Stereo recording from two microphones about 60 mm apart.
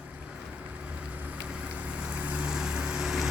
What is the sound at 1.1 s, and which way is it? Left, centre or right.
Vehicle, right.